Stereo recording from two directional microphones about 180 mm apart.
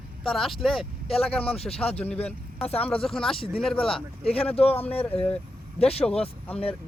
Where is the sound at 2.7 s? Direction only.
5° left (ahead or behind).